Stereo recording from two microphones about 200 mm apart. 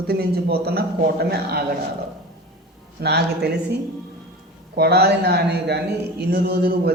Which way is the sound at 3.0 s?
55° right (ahead or behind).